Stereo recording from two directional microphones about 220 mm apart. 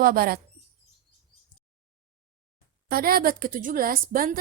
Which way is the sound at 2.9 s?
45° right (ahead or behind).